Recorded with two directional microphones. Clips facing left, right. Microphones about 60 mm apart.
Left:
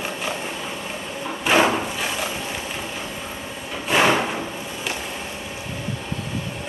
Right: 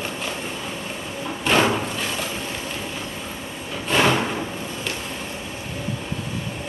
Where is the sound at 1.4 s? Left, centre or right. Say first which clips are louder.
Left 1 dB; centre.